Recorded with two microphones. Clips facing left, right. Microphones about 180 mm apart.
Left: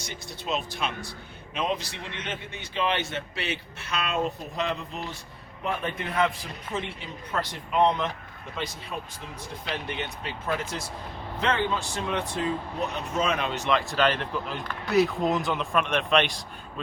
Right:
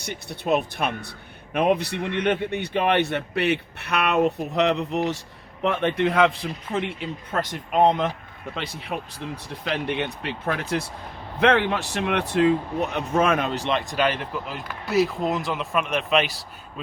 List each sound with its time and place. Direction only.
0.0 s speech: 60° right (ahead or behind)
7.3 s speech: 50° right (ahead or behind)
8.5 s speech: 60° right (ahead or behind); by 13.7 s 40° right (ahead or behind)
13.7 s speech: 20° right (ahead or behind)